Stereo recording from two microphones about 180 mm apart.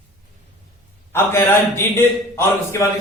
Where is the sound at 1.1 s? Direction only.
15° left (ahead or behind).